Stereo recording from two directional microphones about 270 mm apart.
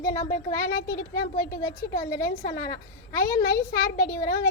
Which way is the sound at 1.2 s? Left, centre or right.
Left.